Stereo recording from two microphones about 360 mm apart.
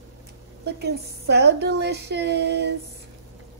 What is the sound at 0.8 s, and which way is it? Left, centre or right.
Speech, right.